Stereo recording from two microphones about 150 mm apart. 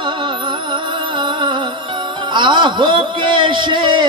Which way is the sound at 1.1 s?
30° right (ahead or behind).